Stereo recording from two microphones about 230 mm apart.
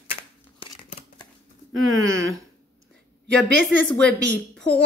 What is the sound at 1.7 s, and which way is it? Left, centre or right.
Speech, right.